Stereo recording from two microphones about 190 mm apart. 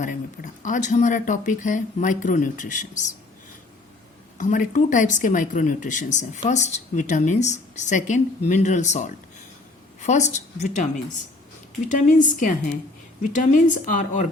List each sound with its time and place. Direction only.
0.0 s speech: 40° left (ahead or behind)
4.4 s a woman's voice: 40° left (ahead or behind)